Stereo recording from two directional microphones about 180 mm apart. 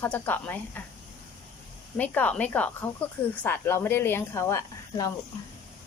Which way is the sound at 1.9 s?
10° left (ahead or behind).